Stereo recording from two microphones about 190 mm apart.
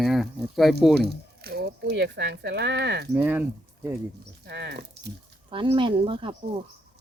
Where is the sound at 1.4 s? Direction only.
60° right (ahead or behind).